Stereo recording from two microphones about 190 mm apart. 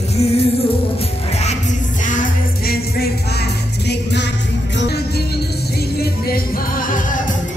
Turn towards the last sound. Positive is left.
turn(degrees=45)  # may be behind; listen again after turning